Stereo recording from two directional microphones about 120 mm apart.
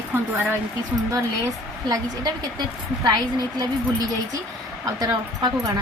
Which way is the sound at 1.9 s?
35° right (ahead or behind).